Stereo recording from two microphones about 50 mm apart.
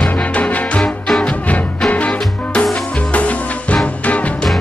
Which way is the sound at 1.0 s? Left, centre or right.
Centre.